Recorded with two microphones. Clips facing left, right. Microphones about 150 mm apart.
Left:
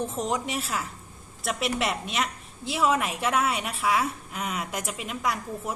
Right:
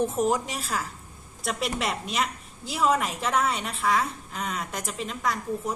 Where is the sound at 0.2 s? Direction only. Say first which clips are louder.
Right 3 dB; centre (ahead or behind).